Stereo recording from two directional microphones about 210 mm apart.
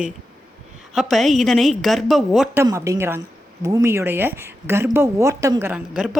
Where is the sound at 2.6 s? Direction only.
15° right (ahead or behind).